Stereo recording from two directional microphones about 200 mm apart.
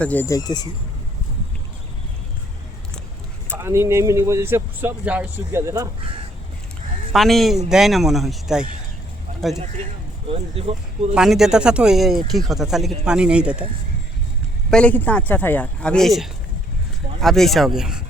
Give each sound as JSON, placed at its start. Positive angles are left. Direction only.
{"t": 0.0, "sound": "speech", "side_deg": 10}
{"t": 3.5, "sound": "speech", "side_deg": -15}
{"t": 7.1, "sound": "speech", "side_deg": 0}
{"t": 10.2, "sound": "speech", "side_deg": -30}
{"t": 11.1, "sound": "speech", "side_deg": 0}
{"t": 14.7, "sound": "speech", "side_deg": 5}